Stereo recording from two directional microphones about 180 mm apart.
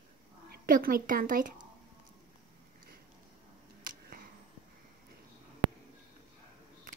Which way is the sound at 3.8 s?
55° right (ahead or behind).